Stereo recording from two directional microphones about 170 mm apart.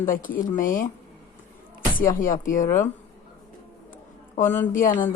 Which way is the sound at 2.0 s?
55° left (ahead or behind).